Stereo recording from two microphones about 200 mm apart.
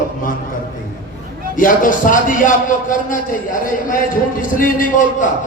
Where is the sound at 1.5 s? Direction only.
40° left (ahead or behind).